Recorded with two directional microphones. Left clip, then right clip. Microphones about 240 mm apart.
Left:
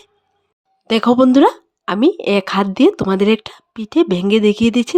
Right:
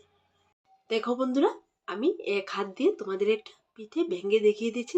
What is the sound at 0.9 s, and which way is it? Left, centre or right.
Speech, left.